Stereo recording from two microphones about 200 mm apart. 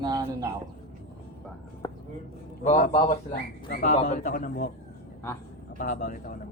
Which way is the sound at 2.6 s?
40° left (ahead or behind).